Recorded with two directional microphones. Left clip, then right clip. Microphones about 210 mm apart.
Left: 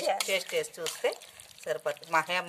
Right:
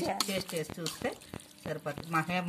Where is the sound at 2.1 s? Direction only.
55° left (ahead or behind).